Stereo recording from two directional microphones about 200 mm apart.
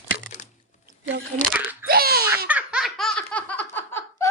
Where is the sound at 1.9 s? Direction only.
50° right (ahead or behind).